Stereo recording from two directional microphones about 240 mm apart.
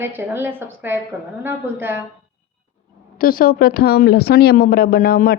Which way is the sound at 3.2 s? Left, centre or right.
Left.